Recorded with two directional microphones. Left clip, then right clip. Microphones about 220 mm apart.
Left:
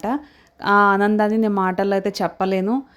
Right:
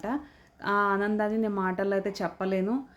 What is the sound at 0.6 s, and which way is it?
A woman's voice, 40° left (ahead or behind).